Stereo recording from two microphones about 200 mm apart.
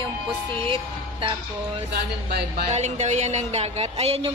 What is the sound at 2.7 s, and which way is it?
Speech, 35° right (ahead or behind).